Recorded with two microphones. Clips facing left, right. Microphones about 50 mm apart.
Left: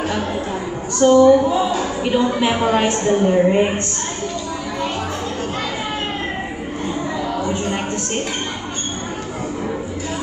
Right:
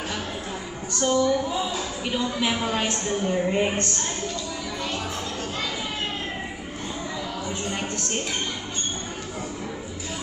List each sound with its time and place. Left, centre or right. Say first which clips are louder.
0.9 s speech: left 11 dB; left
2.4 s a woman's voice: left 8 dB; left
3.4 s a woman's voice: left 7 dB; left
7.6 s a sound: left 7 dB; left